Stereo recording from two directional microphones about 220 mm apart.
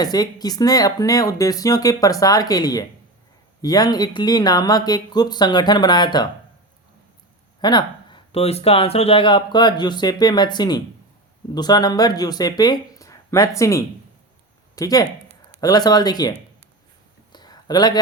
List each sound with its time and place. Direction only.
0.0 s speech: 15° left (ahead or behind)
7.6 s speech: 20° left (ahead or behind)
17.3 s a sound: 20° left (ahead or behind)